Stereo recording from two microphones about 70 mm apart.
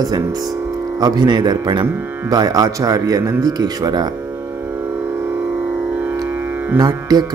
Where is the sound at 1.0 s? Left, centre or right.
Right.